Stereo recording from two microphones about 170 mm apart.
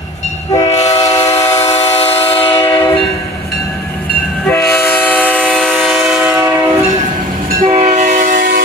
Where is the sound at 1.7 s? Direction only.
40° left (ahead or behind).